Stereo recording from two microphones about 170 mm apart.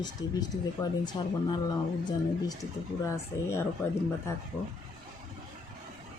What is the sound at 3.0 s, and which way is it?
Speech, 15° left (ahead or behind).